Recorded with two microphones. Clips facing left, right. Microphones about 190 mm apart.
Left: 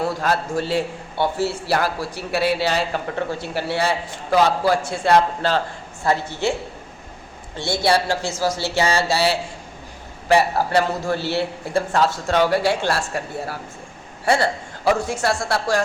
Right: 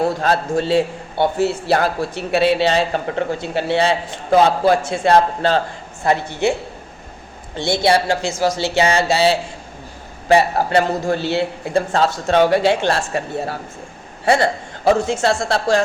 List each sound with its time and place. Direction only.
0.0 s a man's voice: 25° right (ahead or behind)